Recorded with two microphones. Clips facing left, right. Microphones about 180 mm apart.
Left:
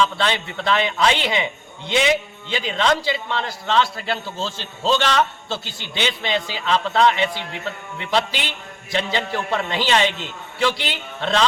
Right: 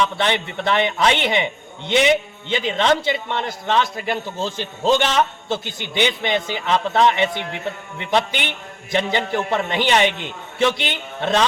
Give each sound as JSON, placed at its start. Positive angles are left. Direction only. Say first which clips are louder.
{"t": 0.2, "sound": "a man's voice", "louder": "right 2 dB", "side_deg": -20}